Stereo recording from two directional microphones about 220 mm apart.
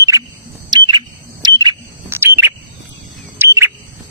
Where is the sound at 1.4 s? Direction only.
15° right (ahead or behind).